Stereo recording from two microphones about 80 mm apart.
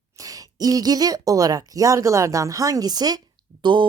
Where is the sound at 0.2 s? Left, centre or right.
Right.